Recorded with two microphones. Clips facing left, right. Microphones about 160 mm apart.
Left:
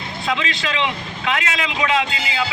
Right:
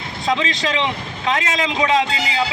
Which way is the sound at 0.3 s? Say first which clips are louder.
Right 3 dB; 30° right (ahead or behind).